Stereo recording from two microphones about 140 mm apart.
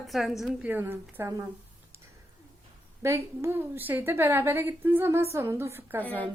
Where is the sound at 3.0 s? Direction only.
20° right (ahead or behind).